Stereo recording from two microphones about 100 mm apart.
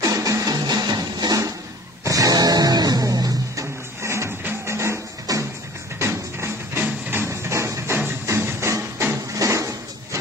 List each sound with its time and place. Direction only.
0.0 s music: 35° right (ahead or behind)
4.0 s music: 25° right (ahead or behind)
9.4 s a sound: 30° right (ahead or behind)